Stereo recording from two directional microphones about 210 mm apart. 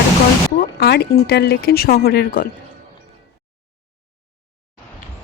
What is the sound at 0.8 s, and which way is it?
Speech, 50° left (ahead or behind).